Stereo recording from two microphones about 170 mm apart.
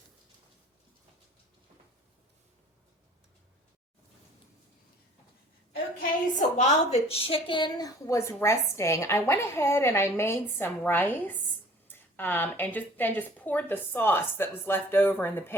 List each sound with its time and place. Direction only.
6.3 s a woman's voice: 40° left (ahead or behind); by 15.5 s 15° left (ahead or behind)